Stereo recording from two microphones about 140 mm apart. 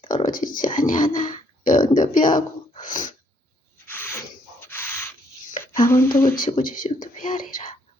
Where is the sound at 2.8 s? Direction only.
70° left (ahead or behind).